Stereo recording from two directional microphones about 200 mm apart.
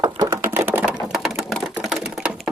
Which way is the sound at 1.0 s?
Centre (ahead or behind).